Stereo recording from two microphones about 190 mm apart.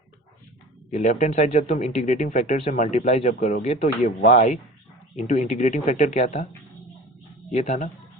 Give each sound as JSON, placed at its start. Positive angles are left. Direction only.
{"t": 0.9, "sound": "speech", "side_deg": 40}
{"t": 7.5, "sound": "speech", "side_deg": 40}